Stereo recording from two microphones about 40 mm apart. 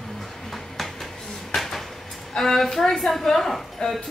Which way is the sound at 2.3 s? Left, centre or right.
Centre.